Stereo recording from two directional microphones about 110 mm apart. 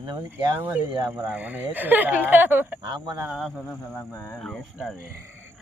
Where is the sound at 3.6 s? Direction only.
15° left (ahead or behind).